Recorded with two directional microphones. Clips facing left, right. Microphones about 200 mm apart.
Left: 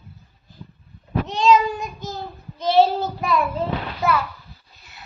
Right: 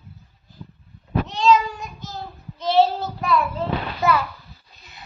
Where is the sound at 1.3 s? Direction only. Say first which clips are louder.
Left 2 dB; 15° left (ahead or behind).